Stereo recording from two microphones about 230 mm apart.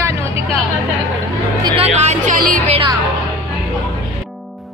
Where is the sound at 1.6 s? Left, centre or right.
Right.